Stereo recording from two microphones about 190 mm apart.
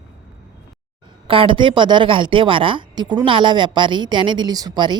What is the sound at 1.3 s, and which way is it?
A woman's voice, 30° right (ahead or behind).